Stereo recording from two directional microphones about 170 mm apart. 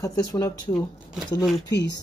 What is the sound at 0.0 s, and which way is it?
Speech, 20° left (ahead or behind).